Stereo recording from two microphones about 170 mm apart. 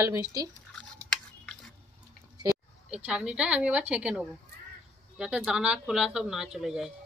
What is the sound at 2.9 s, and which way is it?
A woman's voice, 5° right (ahead or behind).